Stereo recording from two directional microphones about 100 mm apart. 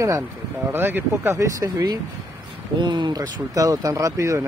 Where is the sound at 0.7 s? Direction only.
20° right (ahead or behind); by 1.9 s 40° right (ahead or behind).